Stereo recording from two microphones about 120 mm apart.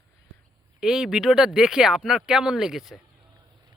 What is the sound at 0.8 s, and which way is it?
Speech, 5° right (ahead or behind).